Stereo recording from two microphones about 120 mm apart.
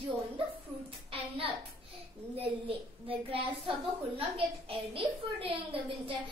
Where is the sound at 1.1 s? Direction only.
50° right (ahead or behind).